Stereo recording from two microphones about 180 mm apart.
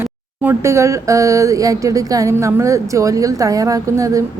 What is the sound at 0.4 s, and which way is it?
Speech, 15° right (ahead or behind).